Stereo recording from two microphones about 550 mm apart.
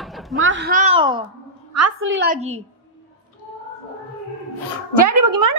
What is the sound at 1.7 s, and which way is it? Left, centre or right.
Speech, right.